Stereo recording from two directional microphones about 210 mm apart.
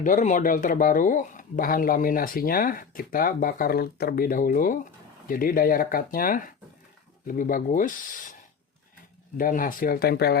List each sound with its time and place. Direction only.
0.0 s speech: 40° left (ahead or behind)
9.4 s speech: 40° left (ahead or behind)